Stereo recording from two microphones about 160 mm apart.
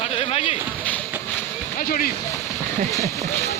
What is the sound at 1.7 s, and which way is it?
Speech, 65° left (ahead or behind).